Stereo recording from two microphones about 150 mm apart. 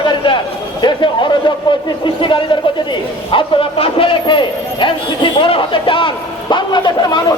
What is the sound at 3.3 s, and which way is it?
A man's voice, 35° left (ahead or behind).